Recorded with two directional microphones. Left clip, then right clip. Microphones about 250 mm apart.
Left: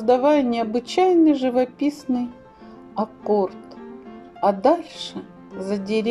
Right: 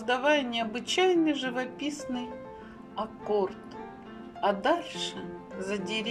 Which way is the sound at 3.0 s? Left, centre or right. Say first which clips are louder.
Left 8 dB; centre.